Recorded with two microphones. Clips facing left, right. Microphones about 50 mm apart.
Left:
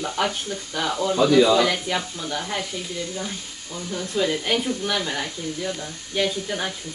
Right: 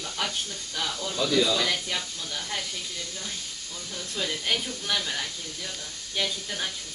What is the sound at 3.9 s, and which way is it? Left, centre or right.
Speech, left.